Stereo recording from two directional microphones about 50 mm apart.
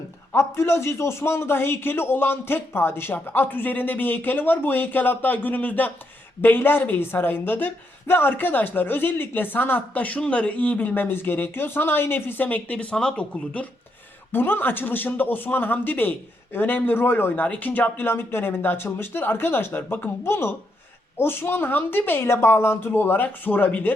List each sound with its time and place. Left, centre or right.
0.3 s speech: left
14.3 s speech: left
17.4 s speech: left
17.9 s speech: left
20.2 s speech: left